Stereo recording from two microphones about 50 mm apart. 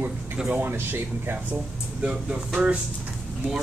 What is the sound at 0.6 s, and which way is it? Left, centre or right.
Speech, right.